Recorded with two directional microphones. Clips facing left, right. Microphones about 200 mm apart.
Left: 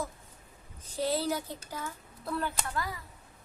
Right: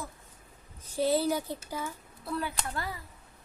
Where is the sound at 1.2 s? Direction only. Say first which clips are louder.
Right 3 dB; 10° right (ahead or behind).